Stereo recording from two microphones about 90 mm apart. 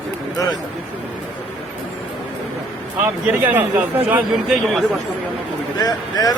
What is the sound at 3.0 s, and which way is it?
Speech, 20° right (ahead or behind).